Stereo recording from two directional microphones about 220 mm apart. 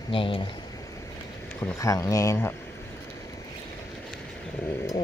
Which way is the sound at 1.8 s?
15° left (ahead or behind).